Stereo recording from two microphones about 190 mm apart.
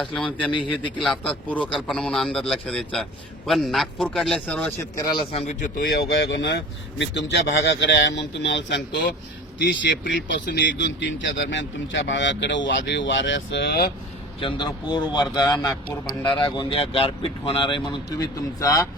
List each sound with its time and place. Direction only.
0.0 s a man's voice: 5° left (ahead or behind)
0.5 s speech: 25° left (ahead or behind)
1.0 s a man's voice: 5° left (ahead or behind)
5.1 s a man's voice: 35° left (ahead or behind); by 13.9 s 60° left (ahead or behind)
14.4 s speech: 25° left (ahead or behind)